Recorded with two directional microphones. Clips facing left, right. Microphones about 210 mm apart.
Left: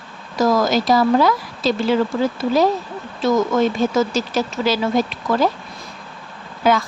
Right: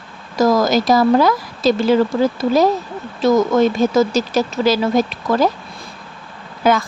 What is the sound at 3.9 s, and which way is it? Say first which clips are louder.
Speech: right 3 dB; 40° right (ahead or behind).